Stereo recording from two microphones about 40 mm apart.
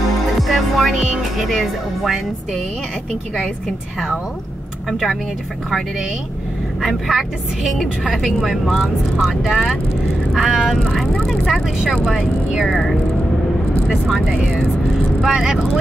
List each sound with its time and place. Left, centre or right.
0.4 s music: centre
1.4 s speech: centre
6.9 s a woman's voice: centre
11.2 s speech: centre
11.8 s a woman's voice: centre
12.1 s a woman's voice: centre
12.7 s speech: centre
15.2 s a woman's voice: centre